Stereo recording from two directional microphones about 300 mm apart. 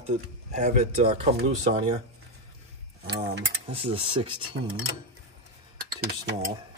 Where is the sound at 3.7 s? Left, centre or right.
Centre.